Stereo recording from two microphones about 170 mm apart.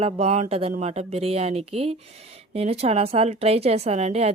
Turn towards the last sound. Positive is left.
turn(degrees=-40)  # may be behind; listen again after turning